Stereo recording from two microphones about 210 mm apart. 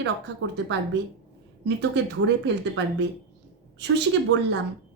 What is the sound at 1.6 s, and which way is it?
Speech, 55° right (ahead or behind).